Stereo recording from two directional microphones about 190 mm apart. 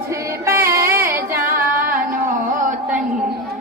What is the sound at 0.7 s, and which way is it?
Music, 10° right (ahead or behind).